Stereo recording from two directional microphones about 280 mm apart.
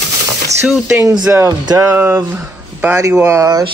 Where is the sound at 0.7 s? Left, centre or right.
Centre.